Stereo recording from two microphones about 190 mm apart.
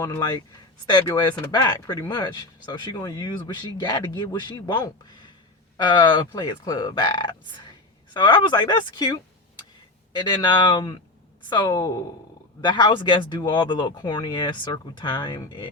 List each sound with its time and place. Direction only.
0.0 s speech: 20° left (ahead or behind)